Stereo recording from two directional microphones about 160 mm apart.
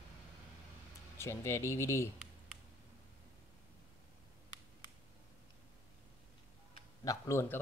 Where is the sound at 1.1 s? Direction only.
15° left (ahead or behind).